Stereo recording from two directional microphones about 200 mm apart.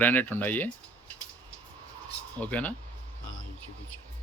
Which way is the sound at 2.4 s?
5° left (ahead or behind).